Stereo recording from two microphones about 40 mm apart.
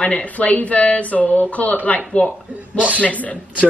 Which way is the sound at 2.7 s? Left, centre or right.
Right.